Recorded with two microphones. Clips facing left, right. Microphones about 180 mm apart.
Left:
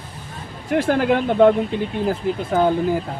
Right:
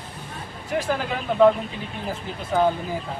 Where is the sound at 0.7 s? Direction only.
60° left (ahead or behind).